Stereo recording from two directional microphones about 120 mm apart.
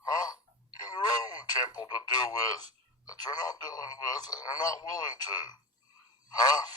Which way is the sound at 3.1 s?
35° left (ahead or behind).